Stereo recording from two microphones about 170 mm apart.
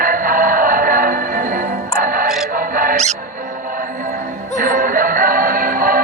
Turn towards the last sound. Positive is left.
turn(degrees=-55)  # may be behind; listen again after turning